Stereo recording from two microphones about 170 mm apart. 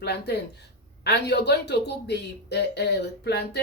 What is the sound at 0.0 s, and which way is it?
Speech, 75° left (ahead or behind).